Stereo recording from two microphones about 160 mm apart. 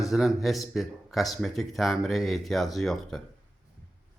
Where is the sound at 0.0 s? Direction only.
Centre (ahead or behind).